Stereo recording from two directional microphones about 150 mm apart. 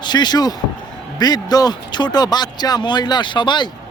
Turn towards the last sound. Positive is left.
turn(degrees=30)  # may be behind; listen again after turning